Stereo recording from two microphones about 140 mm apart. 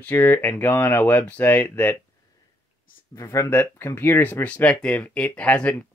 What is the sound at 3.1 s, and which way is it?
Speech, 25° left (ahead or behind).